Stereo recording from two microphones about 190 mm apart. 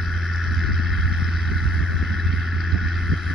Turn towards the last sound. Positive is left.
turn(degrees=0)  # may be behind; listen again after turning